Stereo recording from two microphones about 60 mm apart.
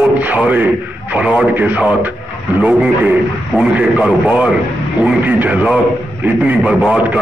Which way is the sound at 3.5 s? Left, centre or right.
Centre.